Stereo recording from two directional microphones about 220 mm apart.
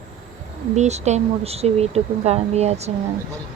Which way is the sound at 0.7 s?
30° right (ahead or behind).